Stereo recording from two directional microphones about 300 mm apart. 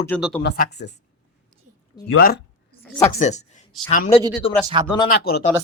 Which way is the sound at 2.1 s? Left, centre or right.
Left.